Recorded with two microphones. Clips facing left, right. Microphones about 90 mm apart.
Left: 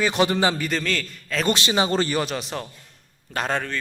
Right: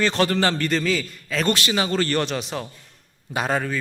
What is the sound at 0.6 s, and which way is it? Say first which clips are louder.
Speech: right 3 dB; centre (ahead or behind).